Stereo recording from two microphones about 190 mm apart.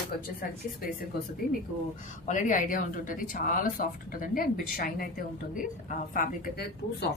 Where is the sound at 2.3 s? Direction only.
40° left (ahead or behind).